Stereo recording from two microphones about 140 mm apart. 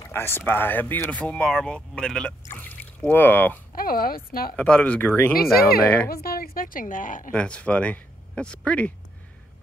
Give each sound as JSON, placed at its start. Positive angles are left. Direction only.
{"t": 0.0, "sound": "a sound", "side_deg": 15}
{"t": 0.5, "sound": "speech", "side_deg": 15}
{"t": 2.4, "sound": "a sound", "side_deg": 15}
{"t": 3.7, "sound": "speech", "side_deg": 90}
{"t": 4.6, "sound": "speech", "side_deg": 10}
{"t": 5.4, "sound": "speech", "side_deg": 90}
{"t": 7.3, "sound": "speech", "side_deg": 10}